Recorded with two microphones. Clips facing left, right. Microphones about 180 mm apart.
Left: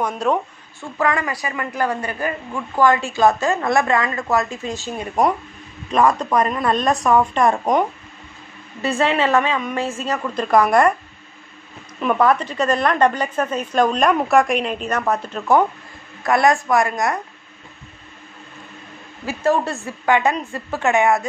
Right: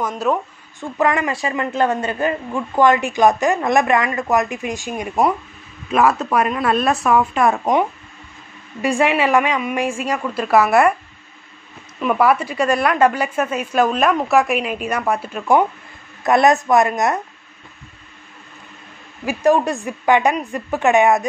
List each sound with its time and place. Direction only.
0.0 s speech: centre (ahead or behind)
0.7 s a man's voice: 20° right (ahead or behind)
8.8 s a woman's voice: 10° right (ahead or behind)
12.0 s a woman's voice: 5° right (ahead or behind)
16.3 s a man's voice: 20° right (ahead or behind)
19.2 s a woman's voice: 15° right (ahead or behind)